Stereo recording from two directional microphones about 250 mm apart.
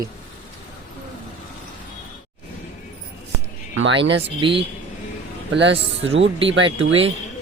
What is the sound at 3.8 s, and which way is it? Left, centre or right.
Speech, right.